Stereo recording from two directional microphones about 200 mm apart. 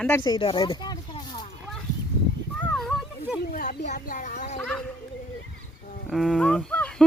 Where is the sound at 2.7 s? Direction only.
Centre (ahead or behind).